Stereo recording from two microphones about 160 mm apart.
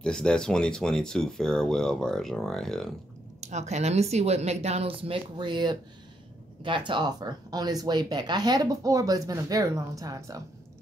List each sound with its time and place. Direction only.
0.0 s speech: 5° left (ahead or behind)
3.3 s speech: 45° right (ahead or behind); by 10.4 s 20° right (ahead or behind)